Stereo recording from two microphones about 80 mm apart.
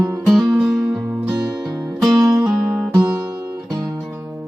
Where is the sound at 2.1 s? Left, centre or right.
Right.